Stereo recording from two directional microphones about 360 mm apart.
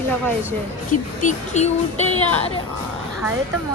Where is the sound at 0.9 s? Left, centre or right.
Left.